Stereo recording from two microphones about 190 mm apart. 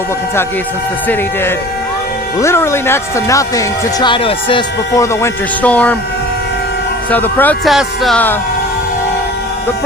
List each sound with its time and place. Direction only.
2.4 s speech: 15° left (ahead or behind)
5.2 s speech: 10° left (ahead or behind)
7.1 s speech: 10° left (ahead or behind)